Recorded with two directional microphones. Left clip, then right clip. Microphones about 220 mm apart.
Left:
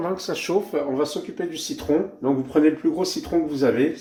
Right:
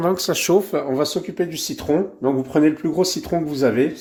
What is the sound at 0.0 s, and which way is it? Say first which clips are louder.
Speech: right 6 dB; 55° right (ahead or behind).